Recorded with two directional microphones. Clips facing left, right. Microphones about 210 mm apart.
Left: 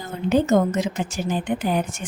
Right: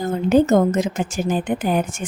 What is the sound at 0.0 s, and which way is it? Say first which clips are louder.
A woman's voice: right 5 dB; 45° right (ahead or behind).